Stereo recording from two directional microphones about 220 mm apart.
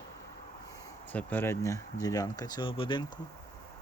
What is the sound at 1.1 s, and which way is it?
Speech, 10° left (ahead or behind).